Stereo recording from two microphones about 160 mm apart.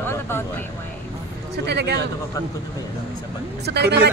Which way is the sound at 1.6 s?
90° right.